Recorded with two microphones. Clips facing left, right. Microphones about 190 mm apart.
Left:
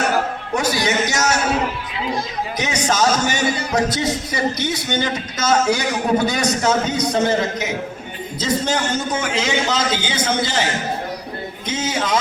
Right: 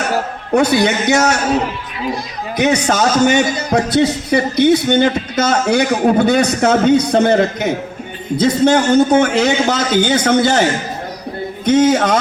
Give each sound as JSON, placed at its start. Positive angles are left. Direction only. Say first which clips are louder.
{"t": 0.5, "sound": "speech", "louder": "right 7 dB", "side_deg": -60}
{"t": 2.6, "sound": "speech", "louder": "right 6 dB", "side_deg": -60}
{"t": 3.5, "sound": "music", "louder": "right 5 dB", "side_deg": -40}
{"t": 3.8, "sound": "speech", "louder": "right 7 dB", "side_deg": -60}